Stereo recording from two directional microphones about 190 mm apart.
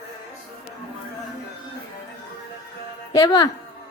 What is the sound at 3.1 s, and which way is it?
Speech, 20° left (ahead or behind).